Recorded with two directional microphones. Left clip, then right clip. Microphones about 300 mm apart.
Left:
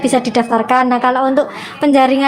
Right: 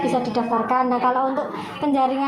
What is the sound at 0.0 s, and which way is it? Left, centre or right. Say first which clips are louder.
A woman's voice: left 7 dB; left.